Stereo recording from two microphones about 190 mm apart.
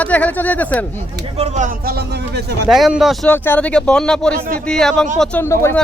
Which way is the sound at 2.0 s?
60° right (ahead or behind).